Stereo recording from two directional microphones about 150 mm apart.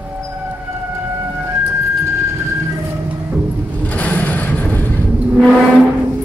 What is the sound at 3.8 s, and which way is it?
Vehicle, 10° left (ahead or behind).